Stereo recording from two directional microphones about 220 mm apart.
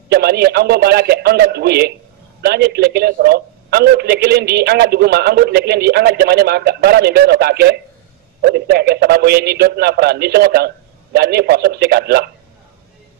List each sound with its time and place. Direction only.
0.1 s a man's voice: 45° right (ahead or behind)